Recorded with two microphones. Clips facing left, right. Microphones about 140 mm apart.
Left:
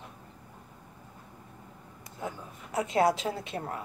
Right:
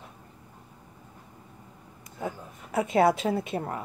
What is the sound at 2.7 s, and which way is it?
Speech, 55° right (ahead or behind).